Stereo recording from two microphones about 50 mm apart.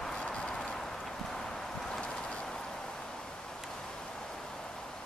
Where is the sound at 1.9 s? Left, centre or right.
Centre.